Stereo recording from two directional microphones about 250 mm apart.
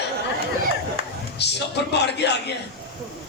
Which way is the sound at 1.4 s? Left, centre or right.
Left.